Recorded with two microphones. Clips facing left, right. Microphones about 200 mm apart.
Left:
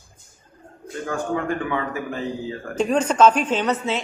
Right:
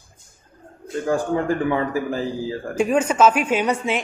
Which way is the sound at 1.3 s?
30° right (ahead or behind).